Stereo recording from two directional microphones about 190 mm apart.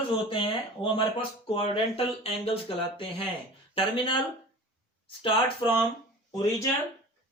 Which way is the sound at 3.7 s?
25° left (ahead or behind).